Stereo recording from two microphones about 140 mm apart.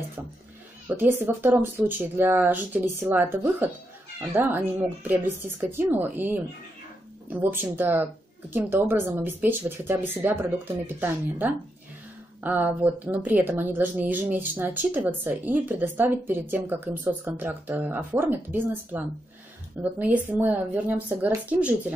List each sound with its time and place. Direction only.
0.8 s a woman's voice: 15° right (ahead or behind)